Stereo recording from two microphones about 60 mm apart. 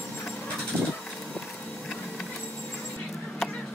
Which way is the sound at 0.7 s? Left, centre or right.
Right.